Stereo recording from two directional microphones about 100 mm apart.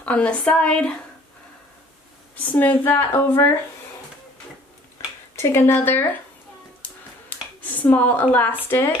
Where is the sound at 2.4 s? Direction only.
20° left (ahead or behind).